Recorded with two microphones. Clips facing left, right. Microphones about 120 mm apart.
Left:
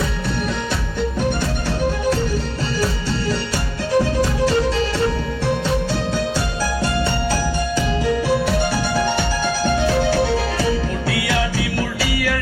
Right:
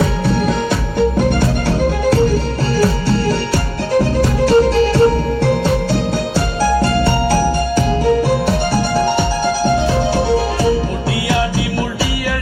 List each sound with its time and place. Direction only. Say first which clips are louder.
4.4 s music: right 10 dB; 45° right (ahead or behind)
7.0 s music: right 6 dB; 35° right (ahead or behind)
9.8 s music: right 2 dB; 25° right (ahead or behind)